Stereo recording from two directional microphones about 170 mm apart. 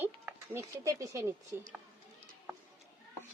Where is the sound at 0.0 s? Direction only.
15° right (ahead or behind).